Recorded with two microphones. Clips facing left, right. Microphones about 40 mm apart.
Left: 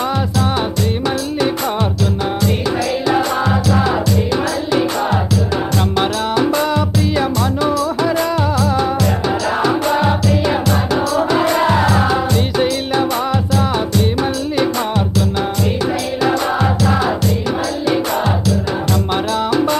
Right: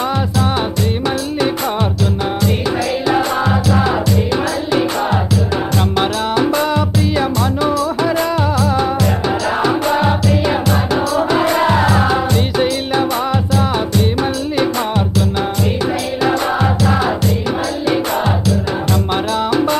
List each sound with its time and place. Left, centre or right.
3.1 s music: right
5.9 s music: right
16.2 s music: centre
19.3 s music: right